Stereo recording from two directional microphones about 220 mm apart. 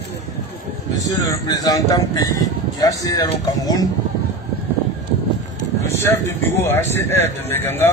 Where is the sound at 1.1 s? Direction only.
15° left (ahead or behind).